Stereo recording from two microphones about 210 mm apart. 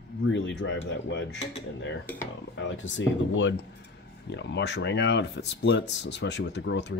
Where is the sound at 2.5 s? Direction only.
60° left (ahead or behind).